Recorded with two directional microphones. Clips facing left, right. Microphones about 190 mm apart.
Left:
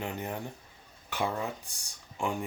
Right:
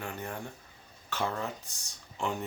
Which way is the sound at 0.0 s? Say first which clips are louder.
Left 3 dB; 20° left (ahead or behind).